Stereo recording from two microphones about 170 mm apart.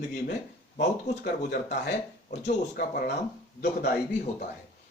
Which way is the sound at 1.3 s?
65° left (ahead or behind).